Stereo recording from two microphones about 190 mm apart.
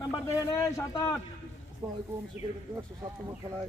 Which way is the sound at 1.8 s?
20° right (ahead or behind).